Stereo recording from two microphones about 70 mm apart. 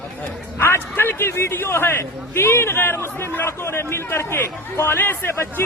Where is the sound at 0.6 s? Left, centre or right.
Left.